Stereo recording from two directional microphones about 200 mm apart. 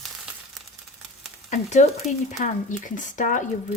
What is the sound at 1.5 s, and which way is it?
Speech, 35° left (ahead or behind).